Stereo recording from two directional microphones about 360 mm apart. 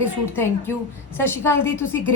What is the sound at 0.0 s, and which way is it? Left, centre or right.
A woman's voice, centre.